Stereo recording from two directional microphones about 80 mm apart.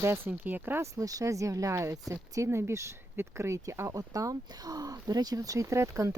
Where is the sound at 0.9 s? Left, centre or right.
Right.